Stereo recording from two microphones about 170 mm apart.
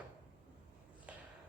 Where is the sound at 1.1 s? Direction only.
5° right (ahead or behind).